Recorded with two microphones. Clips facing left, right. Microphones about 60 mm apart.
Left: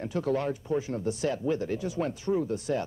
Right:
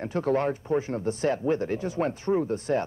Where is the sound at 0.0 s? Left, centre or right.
Right.